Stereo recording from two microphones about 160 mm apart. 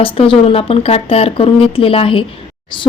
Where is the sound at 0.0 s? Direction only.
35° left (ahead or behind).